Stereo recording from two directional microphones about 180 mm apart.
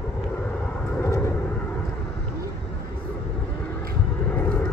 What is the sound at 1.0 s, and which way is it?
Vehicle, 15° left (ahead or behind).